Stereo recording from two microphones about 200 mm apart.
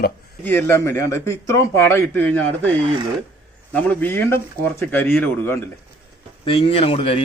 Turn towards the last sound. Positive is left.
turn(degrees=30)  # may be behind; listen again after turning